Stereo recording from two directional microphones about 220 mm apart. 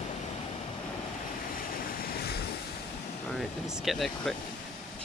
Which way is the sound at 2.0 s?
45° left (ahead or behind).